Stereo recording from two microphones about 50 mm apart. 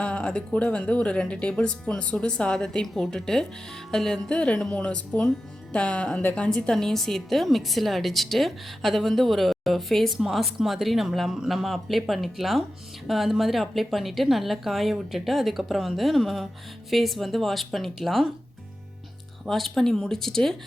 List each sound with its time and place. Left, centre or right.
0.0 s a woman's voice: left
2.8 s a woman's voice: centre; by 6.2 s left
6.7 s a woman's voice: centre
19.5 s a woman's voice: centre